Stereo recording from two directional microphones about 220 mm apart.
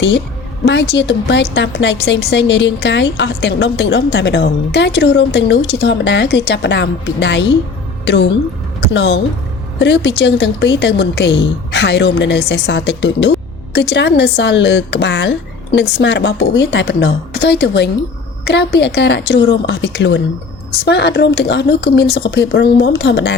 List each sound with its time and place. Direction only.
0.6 s a woman's voice: 50° left (ahead or behind)